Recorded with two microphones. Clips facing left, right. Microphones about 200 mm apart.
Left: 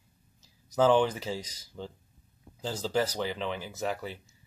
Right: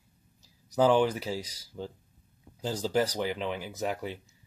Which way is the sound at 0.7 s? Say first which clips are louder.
Even; 10° right (ahead or behind).